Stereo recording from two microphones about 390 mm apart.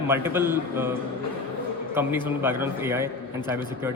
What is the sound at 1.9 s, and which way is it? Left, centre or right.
A man's voice, centre.